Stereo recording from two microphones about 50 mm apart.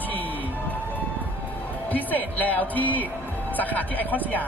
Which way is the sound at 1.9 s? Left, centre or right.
Left.